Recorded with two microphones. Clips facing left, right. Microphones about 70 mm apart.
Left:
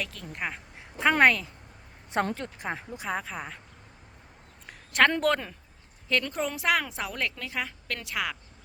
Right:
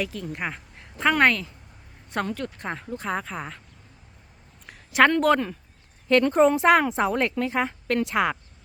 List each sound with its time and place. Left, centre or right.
0.0 s speech: centre
0.8 s a sound: centre
1.2 s speech: centre
2.1 s speech: centre
4.6 s a sound: centre
5.2 s speech: centre
6.1 s a woman's voice: right